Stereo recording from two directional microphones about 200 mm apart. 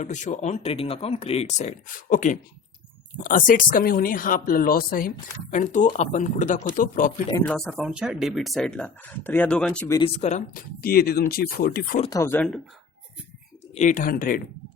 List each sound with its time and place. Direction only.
0.0 s speech: 35° left (ahead or behind)
7.4 s speech: centre (ahead or behind)
10.2 s speech: 35° left (ahead or behind)
12.0 s speech: 15° left (ahead or behind)
13.7 s speech: 40° left (ahead or behind)